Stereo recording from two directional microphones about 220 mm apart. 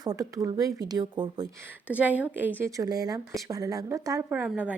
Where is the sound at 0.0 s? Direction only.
15° right (ahead or behind).